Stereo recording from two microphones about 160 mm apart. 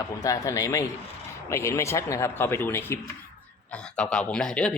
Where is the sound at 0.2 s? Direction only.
20° left (ahead or behind).